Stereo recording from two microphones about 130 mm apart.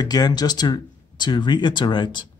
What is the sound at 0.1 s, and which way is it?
Speech, 30° left (ahead or behind).